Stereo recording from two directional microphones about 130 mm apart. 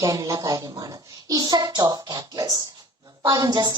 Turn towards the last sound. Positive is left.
turn(degrees=-30)  # may be behind; listen again after turning